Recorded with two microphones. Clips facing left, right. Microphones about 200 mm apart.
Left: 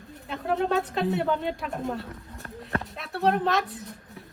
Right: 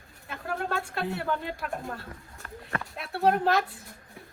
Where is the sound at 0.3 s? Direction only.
Centre (ahead or behind).